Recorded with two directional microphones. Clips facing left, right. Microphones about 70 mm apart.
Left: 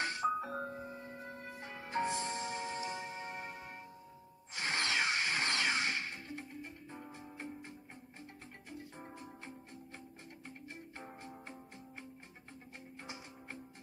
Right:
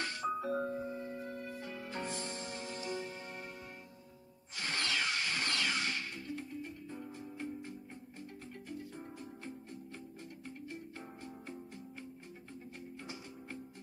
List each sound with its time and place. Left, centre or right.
0.0 s music: left
10.7 s music: left
13.0 s music: left